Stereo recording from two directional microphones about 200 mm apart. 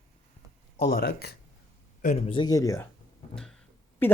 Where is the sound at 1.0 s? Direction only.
55° left (ahead or behind).